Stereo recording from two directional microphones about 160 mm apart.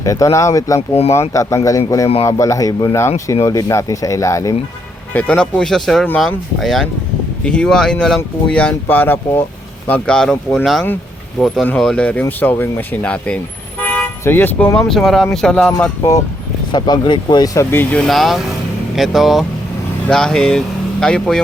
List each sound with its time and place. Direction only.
0.0 s speech: 20° left (ahead or behind)
0.8 s speech: 40° left (ahead or behind)
1.3 s speech: 20° left (ahead or behind)
5.1 s speech: 5° left (ahead or behind)
16.7 s speech: 30° left (ahead or behind); by 21.4 s 5° left (ahead or behind)